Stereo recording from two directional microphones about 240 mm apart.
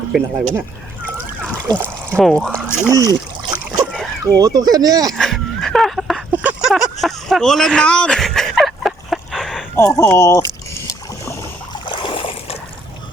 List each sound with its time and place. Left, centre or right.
1.6 s splash: centre
2.1 s speech: centre
2.9 s splash: centre
4.4 s speech: centre
5.1 s a sound: centre
9.7 s speech: centre
11.9 s boat: left